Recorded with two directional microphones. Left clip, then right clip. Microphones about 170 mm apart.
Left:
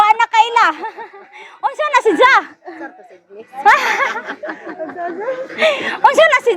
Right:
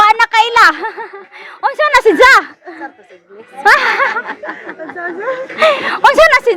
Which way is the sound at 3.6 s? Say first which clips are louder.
Right 2 dB; 15° right (ahead or behind).